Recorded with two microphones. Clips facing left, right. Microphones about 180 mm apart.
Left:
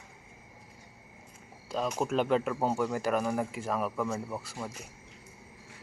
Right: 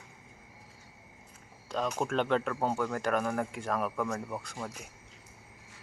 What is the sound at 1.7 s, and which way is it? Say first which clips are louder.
Speech: left 1 dB; 5° left (ahead or behind).